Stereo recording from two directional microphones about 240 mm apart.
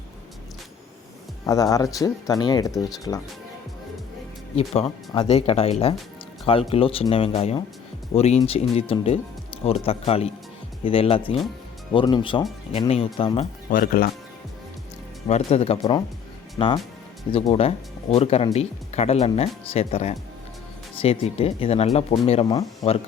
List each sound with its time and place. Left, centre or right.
1.5 s speech: centre
4.5 s speech: left
15.3 s speech: left